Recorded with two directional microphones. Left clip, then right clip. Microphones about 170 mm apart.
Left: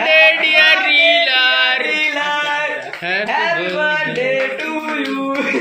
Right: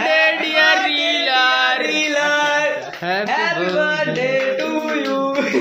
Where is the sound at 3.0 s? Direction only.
35° right (ahead or behind).